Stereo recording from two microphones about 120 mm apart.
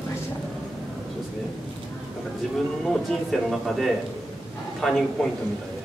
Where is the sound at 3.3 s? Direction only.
Centre (ahead or behind).